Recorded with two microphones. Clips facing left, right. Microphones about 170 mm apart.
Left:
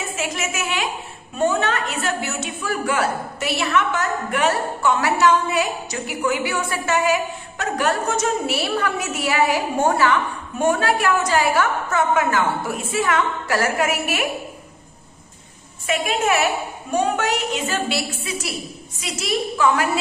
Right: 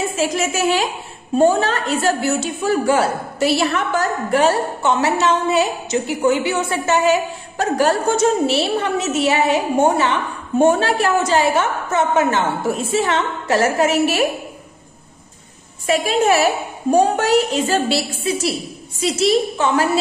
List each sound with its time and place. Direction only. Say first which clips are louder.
0.1 s a woman's voice: right 7 dB; 30° right (ahead or behind)
15.9 s a woman's voice: right 5 dB; 35° right (ahead or behind)